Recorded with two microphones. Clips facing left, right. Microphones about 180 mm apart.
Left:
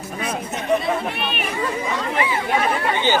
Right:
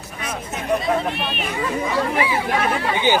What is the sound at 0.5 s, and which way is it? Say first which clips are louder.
Chatter: left 1 dB; centre (ahead or behind).